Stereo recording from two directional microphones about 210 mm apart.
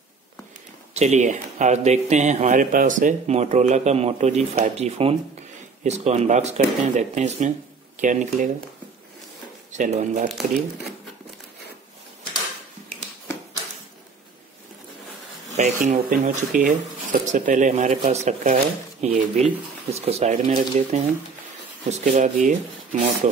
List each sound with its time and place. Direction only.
0.9 s speech: 35° right (ahead or behind)
9.7 s speech: 35° right (ahead or behind)
15.5 s speech: 40° right (ahead or behind)